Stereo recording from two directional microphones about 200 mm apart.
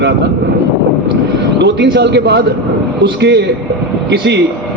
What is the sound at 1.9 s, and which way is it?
A man's voice, 60° right (ahead or behind).